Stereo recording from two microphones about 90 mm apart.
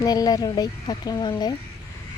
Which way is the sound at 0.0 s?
45° left (ahead or behind).